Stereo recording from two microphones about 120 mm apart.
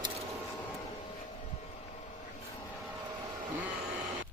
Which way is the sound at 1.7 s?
80° left.